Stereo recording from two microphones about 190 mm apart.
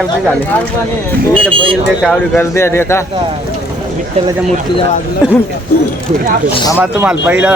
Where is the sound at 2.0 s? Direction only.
5° left (ahead or behind).